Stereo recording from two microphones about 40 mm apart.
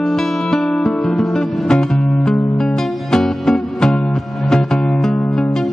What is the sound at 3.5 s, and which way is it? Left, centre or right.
Music, left.